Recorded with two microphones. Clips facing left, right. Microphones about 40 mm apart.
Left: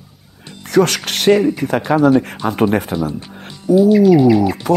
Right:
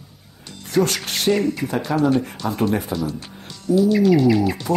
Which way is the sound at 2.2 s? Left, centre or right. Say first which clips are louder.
Left 5 dB; left.